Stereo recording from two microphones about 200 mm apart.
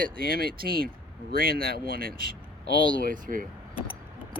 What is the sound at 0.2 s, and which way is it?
Speech, 45° right (ahead or behind).